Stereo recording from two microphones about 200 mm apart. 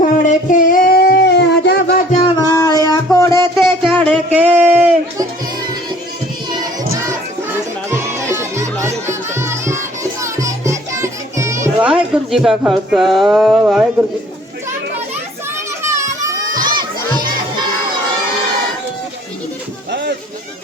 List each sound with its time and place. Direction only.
0.0 s singing: 40° left (ahead or behind); by 2.0 s 55° left (ahead or behind)
2.2 s music: 20° left (ahead or behind)
3.6 s a sound: centre (ahead or behind)
7.9 s music: 10° right (ahead or behind)
12.3 s speech: centre (ahead or behind)
15.8 s children playing: 15° right (ahead or behind)
19.9 s a sound: 60° right (ahead or behind)